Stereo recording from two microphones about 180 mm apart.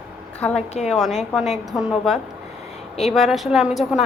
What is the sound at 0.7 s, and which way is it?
Speech, 40° left (ahead or behind).